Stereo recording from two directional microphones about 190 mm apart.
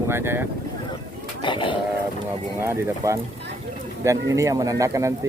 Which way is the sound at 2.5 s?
15° right (ahead or behind).